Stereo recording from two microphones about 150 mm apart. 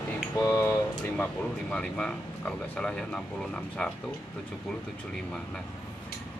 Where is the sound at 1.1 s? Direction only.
5° left (ahead or behind).